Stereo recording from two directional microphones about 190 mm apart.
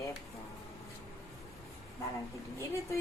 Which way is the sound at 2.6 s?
15° left (ahead or behind).